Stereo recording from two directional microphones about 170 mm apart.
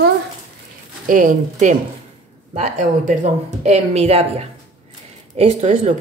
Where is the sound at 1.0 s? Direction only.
50° right (ahead or behind).